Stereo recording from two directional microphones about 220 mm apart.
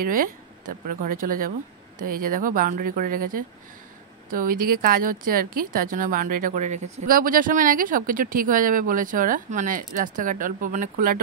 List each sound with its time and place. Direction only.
0.0 s speech: 40° right (ahead or behind)